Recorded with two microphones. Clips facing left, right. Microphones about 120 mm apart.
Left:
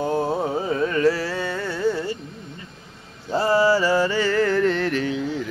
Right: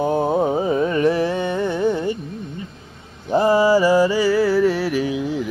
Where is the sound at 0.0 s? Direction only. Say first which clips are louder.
Right 4 dB; 20° right (ahead or behind).